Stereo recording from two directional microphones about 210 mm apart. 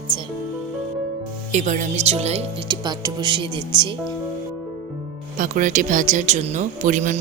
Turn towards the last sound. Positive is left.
turn(degrees=-35)  # may be behind; listen again after turning